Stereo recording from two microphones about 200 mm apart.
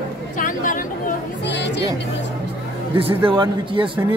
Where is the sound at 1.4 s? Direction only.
60° left (ahead or behind).